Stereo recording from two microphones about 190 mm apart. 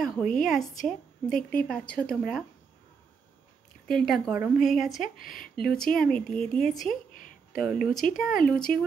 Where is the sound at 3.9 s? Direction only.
Centre (ahead or behind).